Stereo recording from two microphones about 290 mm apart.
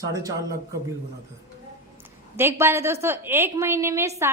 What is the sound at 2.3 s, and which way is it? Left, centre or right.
A woman's voice, centre.